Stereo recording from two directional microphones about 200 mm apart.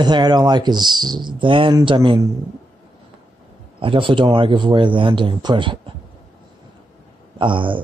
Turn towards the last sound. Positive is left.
turn(degrees=-25)  # may be behind; listen again after turning